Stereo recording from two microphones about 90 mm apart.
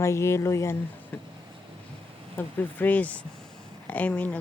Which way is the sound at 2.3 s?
20° left (ahead or behind).